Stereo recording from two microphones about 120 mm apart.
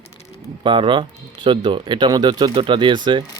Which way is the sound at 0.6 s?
45° right (ahead or behind).